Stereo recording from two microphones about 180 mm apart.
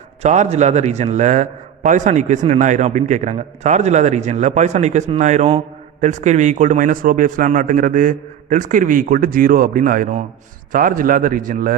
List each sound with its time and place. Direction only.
0.2 s a man's voice: 40° right (ahead or behind)